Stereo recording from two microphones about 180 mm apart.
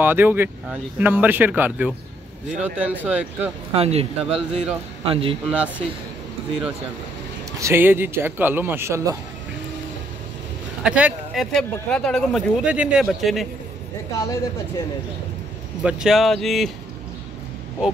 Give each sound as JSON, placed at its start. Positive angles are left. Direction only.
{"t": 0.0, "sound": "speech", "side_deg": -10}
{"t": 3.7, "sound": "speech", "side_deg": -35}
{"t": 4.2, "sound": "speech", "side_deg": -5}
{"t": 5.0, "sound": "speech", "side_deg": -30}
{"t": 5.5, "sound": "speech", "side_deg": -5}
{"t": 7.6, "sound": "speech", "side_deg": -10}
{"t": 10.8, "sound": "speech", "side_deg": -5}
{"t": 14.1, "sound": "speech", "side_deg": 20}
{"t": 15.8, "sound": "speech", "side_deg": -5}